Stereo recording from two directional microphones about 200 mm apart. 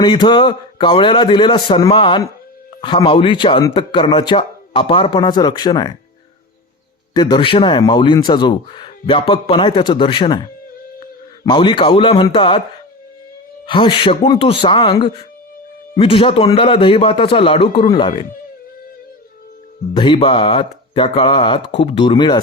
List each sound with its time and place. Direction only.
0.0 s speech: 20° left (ahead or behind)
7.1 s speech: 20° left (ahead or behind)
11.4 s speech: 25° left (ahead or behind)
13.7 s speech: 25° left (ahead or behind)
20.0 s speech: 25° left (ahead or behind)